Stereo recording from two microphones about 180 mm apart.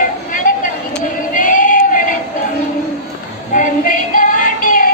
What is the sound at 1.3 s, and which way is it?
Female singing, 50° left (ahead or behind).